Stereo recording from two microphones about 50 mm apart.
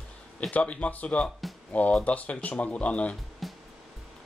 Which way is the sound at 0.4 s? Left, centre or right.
Left.